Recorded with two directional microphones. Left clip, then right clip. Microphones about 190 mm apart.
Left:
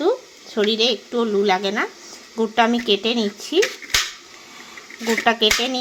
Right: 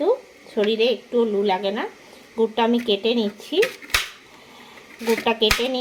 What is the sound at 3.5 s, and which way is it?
Speech, 60° left (ahead or behind).